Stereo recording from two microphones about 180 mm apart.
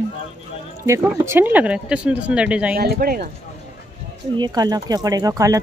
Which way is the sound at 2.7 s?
55° right (ahead or behind).